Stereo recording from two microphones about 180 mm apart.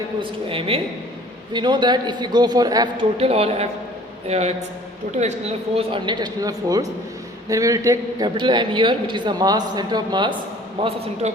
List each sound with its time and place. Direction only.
0.2 s a man's voice: 30° right (ahead or behind)